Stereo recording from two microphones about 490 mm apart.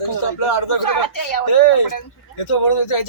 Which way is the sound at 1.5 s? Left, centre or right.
Left.